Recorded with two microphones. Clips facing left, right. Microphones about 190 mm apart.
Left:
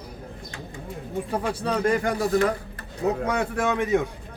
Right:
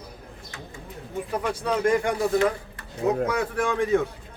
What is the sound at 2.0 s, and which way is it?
Speech, 40° left (ahead or behind).